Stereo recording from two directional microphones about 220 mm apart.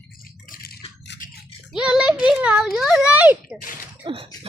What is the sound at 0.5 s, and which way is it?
Rattle, 45° left (ahead or behind).